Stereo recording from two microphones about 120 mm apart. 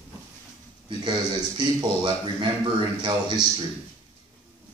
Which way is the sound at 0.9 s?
40° right (ahead or behind).